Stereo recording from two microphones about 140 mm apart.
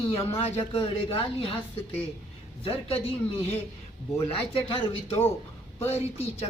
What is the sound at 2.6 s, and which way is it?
Speech, 45° left (ahead or behind).